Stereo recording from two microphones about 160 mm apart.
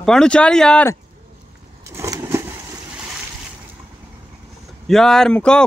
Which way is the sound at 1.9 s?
15° right (ahead or behind).